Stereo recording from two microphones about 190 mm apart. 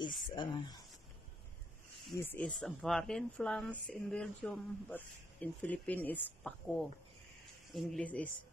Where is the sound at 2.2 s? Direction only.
5° left (ahead or behind).